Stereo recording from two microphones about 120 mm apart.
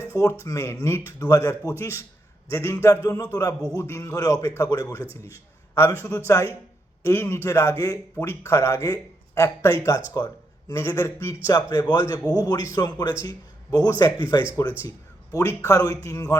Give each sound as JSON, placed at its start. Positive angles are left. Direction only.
{"t": 0.1, "sound": "a man's voice", "side_deg": 25}